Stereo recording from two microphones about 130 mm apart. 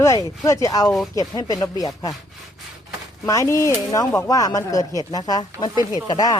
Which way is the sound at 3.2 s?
25° left (ahead or behind).